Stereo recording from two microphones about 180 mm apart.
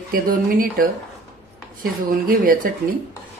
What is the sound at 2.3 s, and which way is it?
Speech, 50° right (ahead or behind).